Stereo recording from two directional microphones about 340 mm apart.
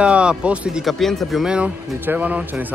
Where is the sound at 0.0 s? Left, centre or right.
Centre.